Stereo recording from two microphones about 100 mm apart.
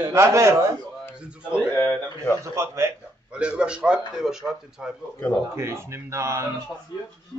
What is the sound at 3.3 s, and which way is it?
A man's voice, 10° right (ahead or behind).